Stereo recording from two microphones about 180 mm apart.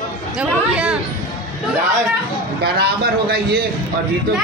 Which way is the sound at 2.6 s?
65° right (ahead or behind).